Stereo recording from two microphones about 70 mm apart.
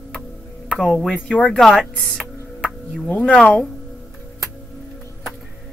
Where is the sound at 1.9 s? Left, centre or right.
Centre.